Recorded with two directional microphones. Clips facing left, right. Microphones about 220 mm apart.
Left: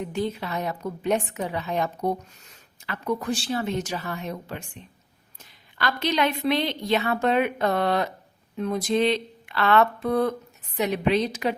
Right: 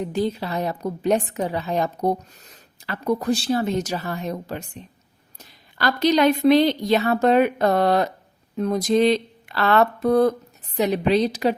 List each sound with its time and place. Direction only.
0.0 s a woman's voice: 35° right (ahead or behind)